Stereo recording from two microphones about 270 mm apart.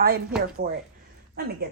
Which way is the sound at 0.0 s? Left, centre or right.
Right.